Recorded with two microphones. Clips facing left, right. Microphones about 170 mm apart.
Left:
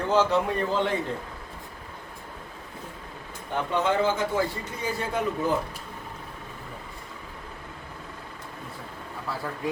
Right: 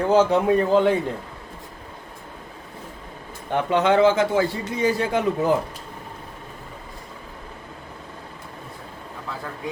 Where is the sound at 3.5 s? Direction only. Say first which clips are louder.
Right 6 dB; 75° right (ahead or behind).